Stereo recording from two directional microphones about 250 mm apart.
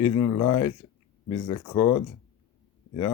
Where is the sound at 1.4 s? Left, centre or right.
Left.